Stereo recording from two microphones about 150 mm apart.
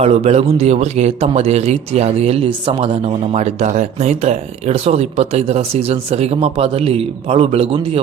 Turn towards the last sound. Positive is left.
turn(degrees=-40)  # may be behind; listen again after turning